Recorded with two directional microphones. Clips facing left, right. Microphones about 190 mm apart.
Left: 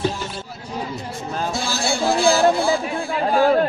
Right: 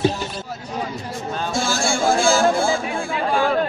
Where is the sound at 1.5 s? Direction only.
50° right (ahead or behind).